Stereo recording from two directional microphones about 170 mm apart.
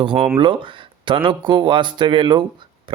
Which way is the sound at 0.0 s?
30° right (ahead or behind).